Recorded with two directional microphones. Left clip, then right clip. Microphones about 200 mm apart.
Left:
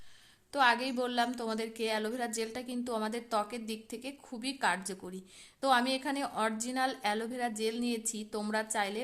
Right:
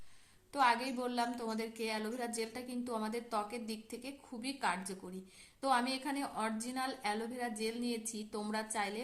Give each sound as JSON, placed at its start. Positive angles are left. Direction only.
{"t": 0.5, "sound": "a woman's voice", "side_deg": 40}